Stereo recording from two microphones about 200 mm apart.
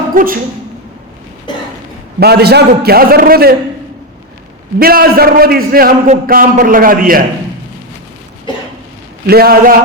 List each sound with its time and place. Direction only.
0.1 s speech: 45° right (ahead or behind)
2.1 s a man's voice: 55° right (ahead or behind)
4.8 s a man's voice: 50° right (ahead or behind)
9.2 s a man's voice: 50° right (ahead or behind)